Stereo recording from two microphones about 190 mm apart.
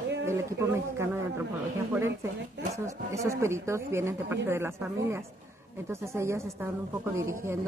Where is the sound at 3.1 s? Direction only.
15° right (ahead or behind).